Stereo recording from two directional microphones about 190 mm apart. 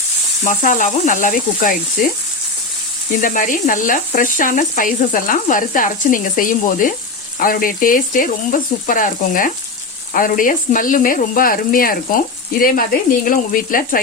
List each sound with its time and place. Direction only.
0.4 s speech: 45° left (ahead or behind)
3.2 s speech: 45° left (ahead or behind)